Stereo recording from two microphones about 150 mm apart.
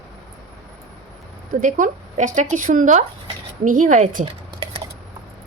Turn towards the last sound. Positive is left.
turn(degrees=-60)  # may be behind; listen again after turning